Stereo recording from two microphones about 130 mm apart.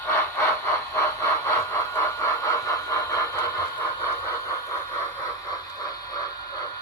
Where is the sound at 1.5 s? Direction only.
15° left (ahead or behind).